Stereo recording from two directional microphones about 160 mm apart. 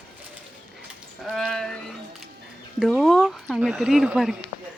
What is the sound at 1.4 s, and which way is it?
Speech, centre (ahead or behind).